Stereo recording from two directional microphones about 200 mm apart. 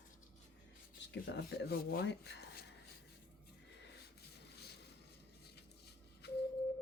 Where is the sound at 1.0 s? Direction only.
60° left (ahead or behind).